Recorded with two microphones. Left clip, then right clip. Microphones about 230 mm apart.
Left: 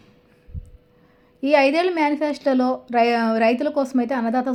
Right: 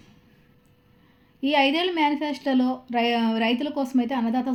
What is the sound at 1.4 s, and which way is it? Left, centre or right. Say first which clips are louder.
A woman's voice: left 5 dB; centre.